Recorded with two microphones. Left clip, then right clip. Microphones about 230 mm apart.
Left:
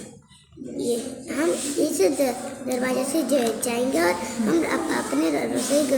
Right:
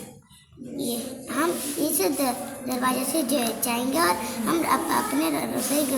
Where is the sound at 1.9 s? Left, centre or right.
Right.